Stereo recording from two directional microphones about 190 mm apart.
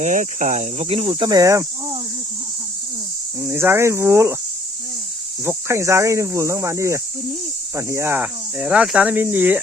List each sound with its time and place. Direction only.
0.0 s speech: 40° right (ahead or behind)
1.3 s speech: 15° right (ahead or behind)
3.4 s speech: 10° right (ahead or behind)
5.5 s speech: 15° right (ahead or behind)